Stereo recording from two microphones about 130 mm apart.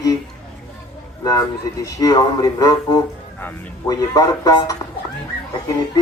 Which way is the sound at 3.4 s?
15° left (ahead or behind).